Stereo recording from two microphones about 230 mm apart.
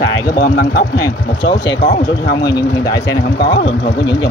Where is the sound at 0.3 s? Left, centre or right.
Left.